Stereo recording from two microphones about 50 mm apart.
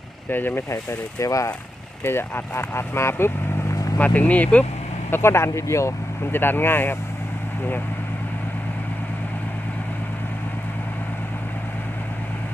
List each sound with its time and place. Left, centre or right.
0.3 s speech: left
0.7 s speech: left
2.0 s speech: left
3.9 s speech: left
5.1 s speech: left
6.3 s speech: left